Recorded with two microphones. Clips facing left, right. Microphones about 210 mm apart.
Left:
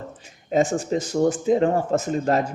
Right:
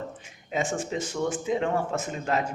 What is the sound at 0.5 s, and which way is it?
Speech, 40° left (ahead or behind).